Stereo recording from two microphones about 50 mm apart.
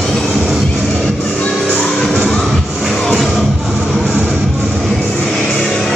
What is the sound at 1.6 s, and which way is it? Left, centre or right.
Music, left.